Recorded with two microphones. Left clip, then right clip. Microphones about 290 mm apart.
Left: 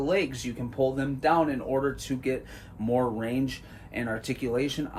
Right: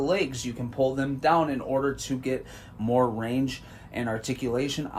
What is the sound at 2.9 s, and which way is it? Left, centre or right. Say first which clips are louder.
Speech: right 3 dB; centre.